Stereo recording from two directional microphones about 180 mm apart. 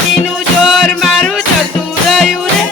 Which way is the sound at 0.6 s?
Centre (ahead or behind).